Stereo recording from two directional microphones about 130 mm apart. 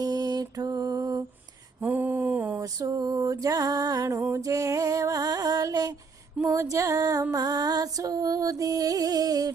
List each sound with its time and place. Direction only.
0.0 s mantra: 30° right (ahead or behind)
1.8 s a sound: 10° right (ahead or behind)
2.6 s music: 25° right (ahead or behind)